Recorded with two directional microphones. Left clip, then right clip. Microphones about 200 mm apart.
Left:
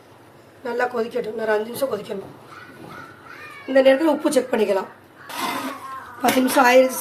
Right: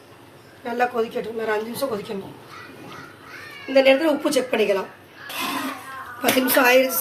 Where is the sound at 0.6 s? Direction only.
50° left (ahead or behind).